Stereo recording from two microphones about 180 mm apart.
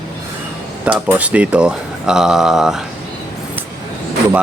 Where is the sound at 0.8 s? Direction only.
5° right (ahead or behind).